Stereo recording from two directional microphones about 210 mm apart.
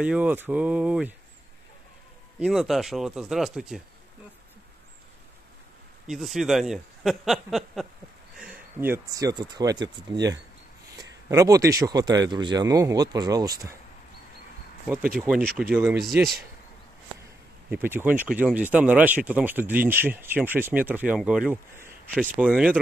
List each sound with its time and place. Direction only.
0.0 s speech: 5° right (ahead or behind)
2.4 s speech: centre (ahead or behind)
6.0 s speech: centre (ahead or behind); by 13.7 s 15° right (ahead or behind)
15.1 s speech: 5° right (ahead or behind)
17.6 s speech: 10° right (ahead or behind)